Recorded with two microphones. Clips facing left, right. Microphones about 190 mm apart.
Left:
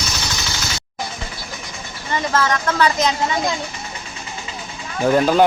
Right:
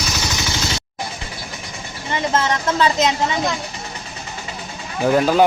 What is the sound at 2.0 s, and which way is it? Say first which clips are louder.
Speech: even; 20° right (ahead or behind).